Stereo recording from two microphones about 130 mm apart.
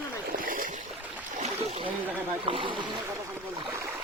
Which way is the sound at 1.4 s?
55° right (ahead or behind).